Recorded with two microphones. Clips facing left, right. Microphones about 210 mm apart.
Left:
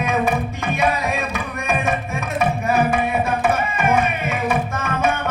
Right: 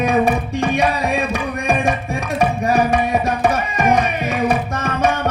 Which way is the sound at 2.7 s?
35° right (ahead or behind).